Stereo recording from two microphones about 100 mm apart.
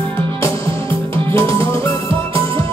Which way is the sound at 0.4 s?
30° left (ahead or behind).